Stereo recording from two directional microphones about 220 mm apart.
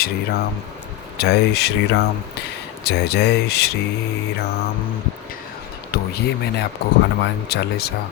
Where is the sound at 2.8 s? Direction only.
50° left (ahead or behind).